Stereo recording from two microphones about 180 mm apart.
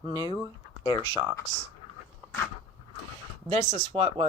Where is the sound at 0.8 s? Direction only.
15° left (ahead or behind).